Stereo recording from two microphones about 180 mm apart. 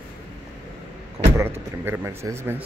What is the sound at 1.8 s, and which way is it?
Speech, 15° right (ahead or behind).